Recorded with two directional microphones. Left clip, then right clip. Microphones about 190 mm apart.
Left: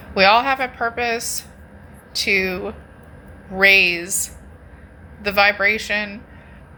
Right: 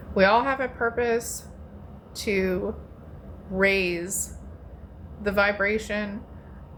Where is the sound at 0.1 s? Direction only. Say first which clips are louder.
Left 6 dB; 15° right (ahead or behind).